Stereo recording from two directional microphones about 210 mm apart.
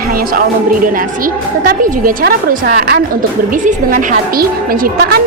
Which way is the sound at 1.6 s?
40° right (ahead or behind).